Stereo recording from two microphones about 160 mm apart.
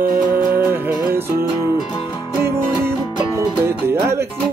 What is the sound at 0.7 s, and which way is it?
Music, 15° right (ahead or behind).